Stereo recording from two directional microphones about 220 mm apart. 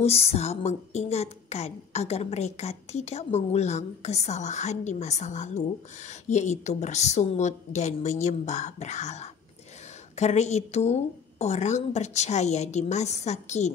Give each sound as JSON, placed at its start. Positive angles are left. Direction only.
{"t": 0.0, "sound": "a woman's voice", "side_deg": 30}